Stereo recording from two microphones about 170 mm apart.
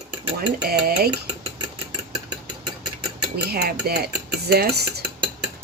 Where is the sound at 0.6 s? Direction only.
65° right (ahead or behind).